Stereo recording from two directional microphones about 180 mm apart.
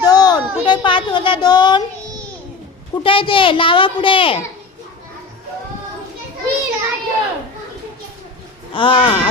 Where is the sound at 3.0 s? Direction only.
30° left (ahead or behind).